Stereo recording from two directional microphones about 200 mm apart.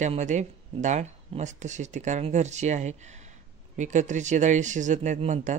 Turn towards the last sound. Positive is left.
turn(degrees=-40)  # may be behind; listen again after turning